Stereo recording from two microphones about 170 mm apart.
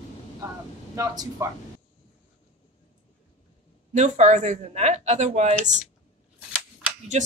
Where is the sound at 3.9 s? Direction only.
45° right (ahead or behind).